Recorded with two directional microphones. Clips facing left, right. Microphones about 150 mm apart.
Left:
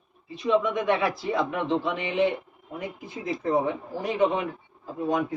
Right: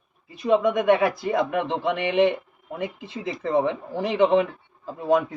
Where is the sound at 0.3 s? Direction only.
50° right (ahead or behind).